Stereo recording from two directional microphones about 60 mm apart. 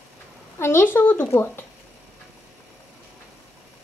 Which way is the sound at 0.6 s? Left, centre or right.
Left.